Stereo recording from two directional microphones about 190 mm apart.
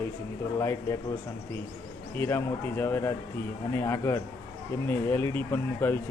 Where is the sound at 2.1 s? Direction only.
10° left (ahead or behind).